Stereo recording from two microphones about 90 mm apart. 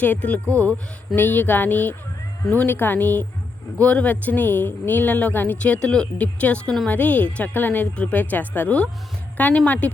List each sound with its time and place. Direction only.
0.0 s speech: 15° left (ahead or behind)
0.4 s speech: 35° right (ahead or behind)
1.1 s a sound: 20° left (ahead or behind)
3.8 s speech: 15° left (ahead or behind)